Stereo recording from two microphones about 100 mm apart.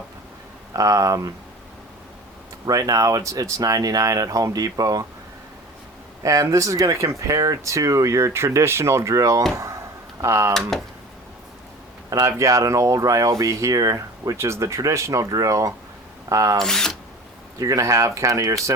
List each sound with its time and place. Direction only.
0.7 s speech: 35° right (ahead or behind)
2.6 s speech: 35° right (ahead or behind)
6.2 s speech: 35° right (ahead or behind)
10.7 s speech: 5° left (ahead or behind)
12.2 s speech: 35° right (ahead or behind)
16.6 s speech: 5° left (ahead or behind)
17.6 s speech: 35° right (ahead or behind)